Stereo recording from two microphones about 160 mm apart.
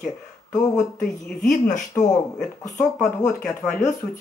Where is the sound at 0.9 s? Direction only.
50° left (ahead or behind).